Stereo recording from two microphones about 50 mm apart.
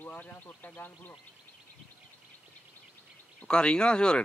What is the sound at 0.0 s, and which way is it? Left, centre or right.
Speech, left.